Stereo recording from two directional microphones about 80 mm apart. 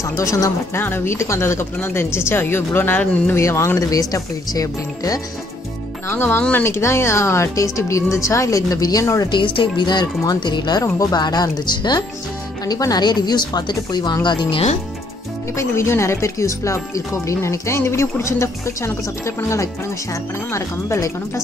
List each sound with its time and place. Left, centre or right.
0.0 s speech: left
0.7 s speech: left
3.3 s speech: left
6.0 s speech: left
9.3 s speech: left
10.8 s a woman's voice: left
14.2 s speech: left
15.5 s speech: left